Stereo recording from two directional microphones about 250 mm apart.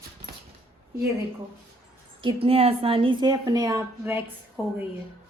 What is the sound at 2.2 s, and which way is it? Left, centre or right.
A woman's voice, right.